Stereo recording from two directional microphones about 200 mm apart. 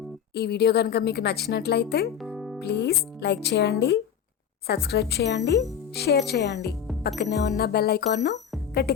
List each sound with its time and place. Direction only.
0.3 s speech: 55° left (ahead or behind)
2.2 s music: centre (ahead or behind)
2.6 s speech: 55° left (ahead or behind)
7.2 s music: 55° left (ahead or behind)